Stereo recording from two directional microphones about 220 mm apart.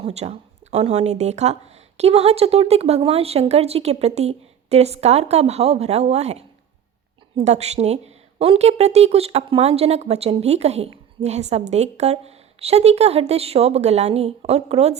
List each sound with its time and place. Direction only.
0.0 s a woman's voice: 30° right (ahead or behind)